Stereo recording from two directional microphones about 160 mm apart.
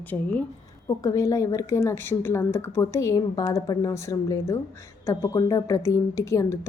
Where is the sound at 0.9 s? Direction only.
20° left (ahead or behind).